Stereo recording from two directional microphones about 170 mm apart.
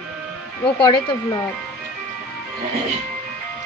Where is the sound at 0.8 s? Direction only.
25° left (ahead or behind).